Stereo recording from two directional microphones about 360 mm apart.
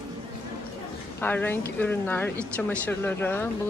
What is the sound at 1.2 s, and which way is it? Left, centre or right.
A woman's voice, centre.